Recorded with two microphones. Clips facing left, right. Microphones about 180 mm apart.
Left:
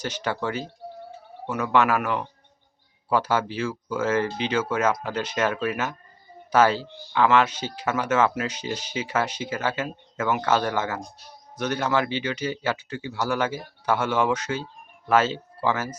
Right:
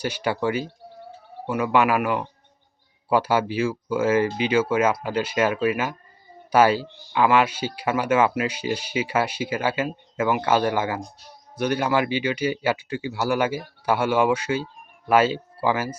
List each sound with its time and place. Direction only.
0.0 s speech: 10° right (ahead or behind)